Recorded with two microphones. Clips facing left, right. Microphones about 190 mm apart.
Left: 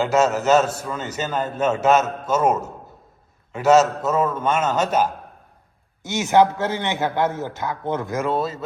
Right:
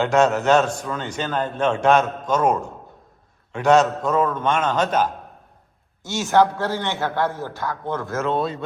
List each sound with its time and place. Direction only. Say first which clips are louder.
0.0 s a man's voice: right 1 dB; centre (ahead or behind)
6.0 s a man's voice: left 1 dB; 20° left (ahead or behind)